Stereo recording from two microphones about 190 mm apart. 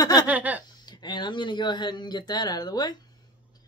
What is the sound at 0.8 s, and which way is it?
Speech, 20° left (ahead or behind).